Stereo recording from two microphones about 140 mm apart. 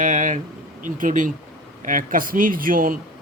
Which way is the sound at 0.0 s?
65° right (ahead or behind).